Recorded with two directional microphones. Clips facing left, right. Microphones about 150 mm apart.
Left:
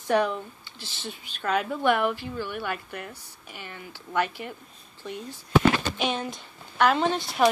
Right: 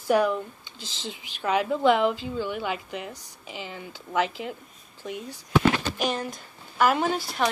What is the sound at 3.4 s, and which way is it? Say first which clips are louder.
Speech: right 5 dB; 90° right.